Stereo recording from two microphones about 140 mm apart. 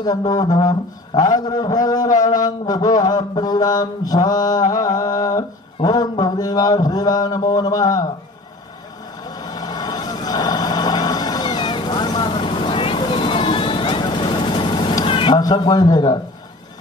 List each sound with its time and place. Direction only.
0.0 s mantra: 30° left (ahead or behind)
9.2 s vehicle: 30° left (ahead or behind)